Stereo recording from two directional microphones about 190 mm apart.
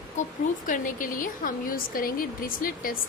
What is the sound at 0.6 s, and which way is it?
A woman's voice, 45° left (ahead or behind).